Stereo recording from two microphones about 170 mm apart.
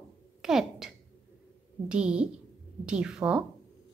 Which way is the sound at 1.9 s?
5° right (ahead or behind).